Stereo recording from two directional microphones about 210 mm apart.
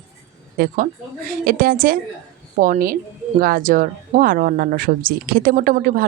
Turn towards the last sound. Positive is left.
turn(degrees=-45)  # may be behind; listen again after turning